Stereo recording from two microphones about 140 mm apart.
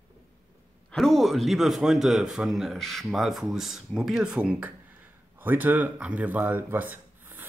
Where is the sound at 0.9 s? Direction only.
Centre (ahead or behind).